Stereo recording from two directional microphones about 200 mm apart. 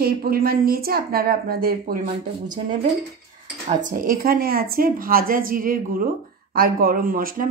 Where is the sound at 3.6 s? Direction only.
40° right (ahead or behind).